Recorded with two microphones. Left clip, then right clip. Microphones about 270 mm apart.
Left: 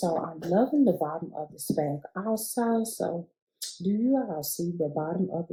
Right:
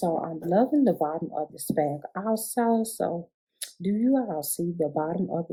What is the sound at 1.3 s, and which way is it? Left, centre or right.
Speech, right.